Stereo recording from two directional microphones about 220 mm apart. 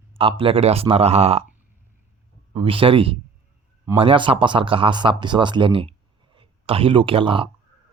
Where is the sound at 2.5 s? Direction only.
25° right (ahead or behind).